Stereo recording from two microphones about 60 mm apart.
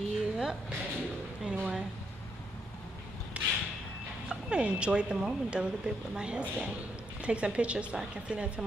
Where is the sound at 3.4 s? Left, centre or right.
Right.